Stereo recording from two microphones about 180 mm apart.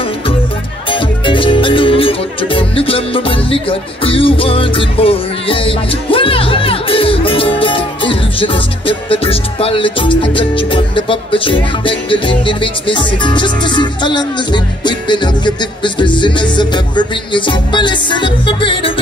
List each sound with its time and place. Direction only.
0.8 s music: 30° left (ahead or behind)